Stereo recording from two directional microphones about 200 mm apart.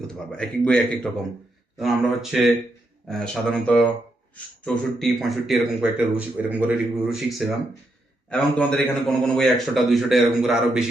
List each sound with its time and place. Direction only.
0.3 s speech: 5° left (ahead or behind)